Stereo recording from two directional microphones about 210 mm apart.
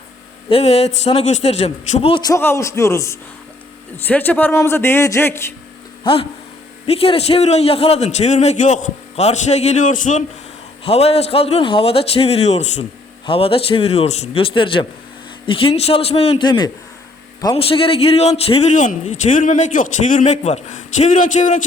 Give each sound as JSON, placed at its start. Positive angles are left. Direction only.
{"t": 0.5, "sound": "a man's voice", "side_deg": 30}
{"t": 6.0, "sound": "a man's voice", "side_deg": 25}